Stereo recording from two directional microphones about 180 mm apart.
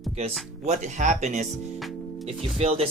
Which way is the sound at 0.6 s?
40° right (ahead or behind).